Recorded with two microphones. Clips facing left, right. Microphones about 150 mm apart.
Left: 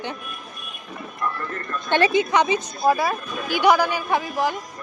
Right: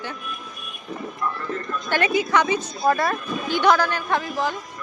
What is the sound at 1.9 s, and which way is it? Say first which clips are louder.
Speech: left 2 dB; 25° left (ahead or behind).